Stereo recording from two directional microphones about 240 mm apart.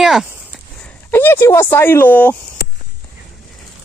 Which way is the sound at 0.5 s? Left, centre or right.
Centre.